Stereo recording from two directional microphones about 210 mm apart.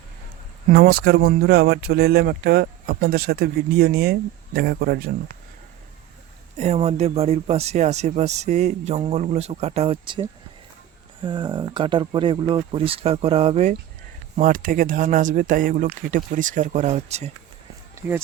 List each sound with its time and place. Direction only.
0.7 s speech: 50° right (ahead or behind)
6.6 s speech: 30° right (ahead or behind)